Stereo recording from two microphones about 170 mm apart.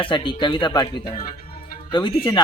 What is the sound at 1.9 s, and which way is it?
Speech, 30° left (ahead or behind).